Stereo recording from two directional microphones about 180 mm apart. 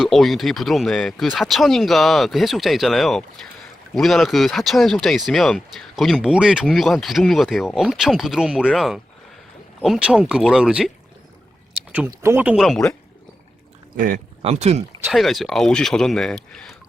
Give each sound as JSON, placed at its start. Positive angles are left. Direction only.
{"t": 0.0, "sound": "speech", "side_deg": 0}
{"t": 13.9, "sound": "speech", "side_deg": -45}
{"t": 15.0, "sound": "speech", "side_deg": 0}